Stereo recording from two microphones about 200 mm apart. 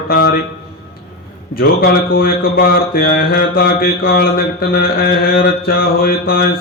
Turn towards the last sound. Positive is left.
turn(degrees=50)  # may be behind; listen again after turning